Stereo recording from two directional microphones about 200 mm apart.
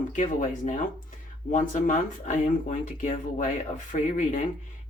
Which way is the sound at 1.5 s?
40° left (ahead or behind).